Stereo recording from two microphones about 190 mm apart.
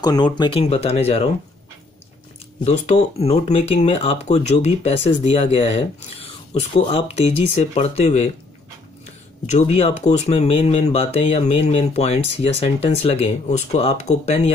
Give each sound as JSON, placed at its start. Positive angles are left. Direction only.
{"t": 0.0, "sound": "speech", "side_deg": 20}
{"t": 2.6, "sound": "speech", "side_deg": 35}
{"t": 9.5, "sound": "speech", "side_deg": 35}